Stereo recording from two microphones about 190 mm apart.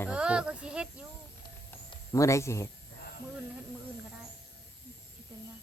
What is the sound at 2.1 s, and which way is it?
Speech, 15° left (ahead or behind).